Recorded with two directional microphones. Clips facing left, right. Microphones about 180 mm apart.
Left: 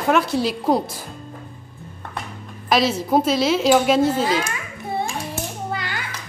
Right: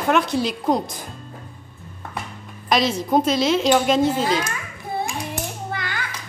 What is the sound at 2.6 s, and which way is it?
Speech, 5° left (ahead or behind).